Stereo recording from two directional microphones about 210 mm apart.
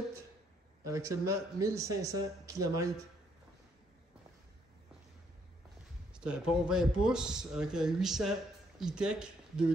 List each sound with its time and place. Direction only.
0.8 s speech: 15° right (ahead or behind)
6.2 s speech: 5° right (ahead or behind)